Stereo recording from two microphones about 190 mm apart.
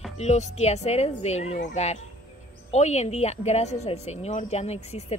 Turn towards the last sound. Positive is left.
turn(degrees=35)  # may be behind; listen again after turning